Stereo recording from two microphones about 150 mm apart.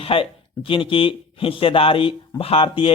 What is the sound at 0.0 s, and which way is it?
Speech, 40° left (ahead or behind).